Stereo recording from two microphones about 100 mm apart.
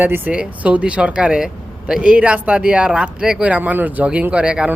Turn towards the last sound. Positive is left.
turn(degrees=-10)  # may be behind; listen again after turning